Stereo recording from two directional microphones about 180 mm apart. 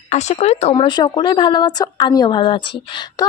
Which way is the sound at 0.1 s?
40° left (ahead or behind).